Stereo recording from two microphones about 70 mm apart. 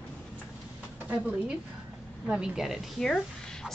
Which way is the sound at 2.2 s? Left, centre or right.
Centre.